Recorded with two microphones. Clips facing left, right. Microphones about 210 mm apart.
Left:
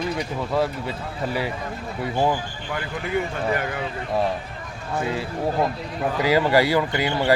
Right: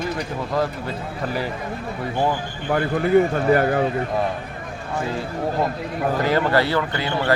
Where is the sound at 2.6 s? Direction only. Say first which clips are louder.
Right 12 dB; 50° right (ahead or behind).